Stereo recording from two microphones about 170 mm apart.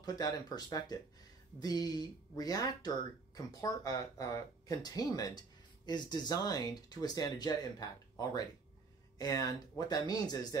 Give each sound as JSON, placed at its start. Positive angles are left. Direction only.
{"t": 0.0, "sound": "speech", "side_deg": 25}